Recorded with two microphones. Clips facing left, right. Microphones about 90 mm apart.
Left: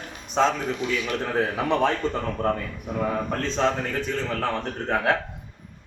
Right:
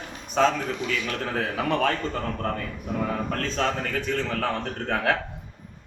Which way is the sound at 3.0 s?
15° left (ahead or behind).